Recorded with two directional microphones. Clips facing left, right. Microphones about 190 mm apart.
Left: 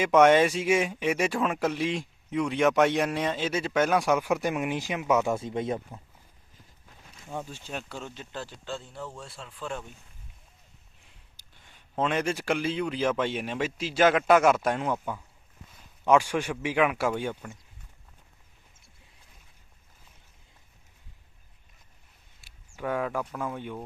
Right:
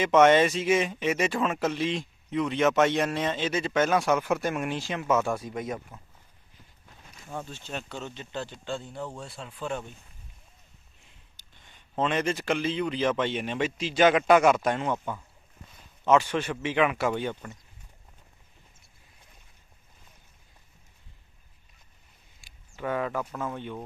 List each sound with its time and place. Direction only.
0.0 s speech: 10° left (ahead or behind); by 6.0 s 30° left (ahead or behind)
7.3 s a man's voice: 15° left (ahead or behind); by 9.8 s 5° right (ahead or behind)
11.7 s a man's voice: 5° left (ahead or behind)
22.4 s a sound: 5° left (ahead or behind)
22.8 s a man's voice: 5° left (ahead or behind)